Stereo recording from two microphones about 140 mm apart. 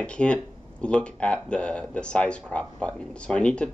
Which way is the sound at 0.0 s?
10° left (ahead or behind).